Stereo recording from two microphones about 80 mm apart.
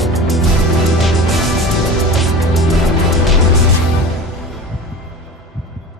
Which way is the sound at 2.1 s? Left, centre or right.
Centre.